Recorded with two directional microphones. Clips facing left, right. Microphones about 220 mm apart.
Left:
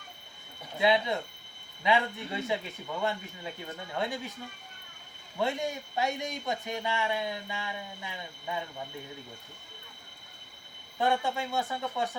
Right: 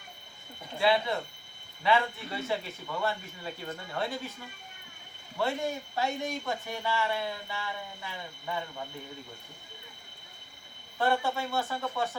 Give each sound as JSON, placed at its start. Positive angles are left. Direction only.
{"t": 0.8, "sound": "speech", "side_deg": 20}
{"t": 5.4, "sound": "speech", "side_deg": 15}
{"t": 10.9, "sound": "speech", "side_deg": 20}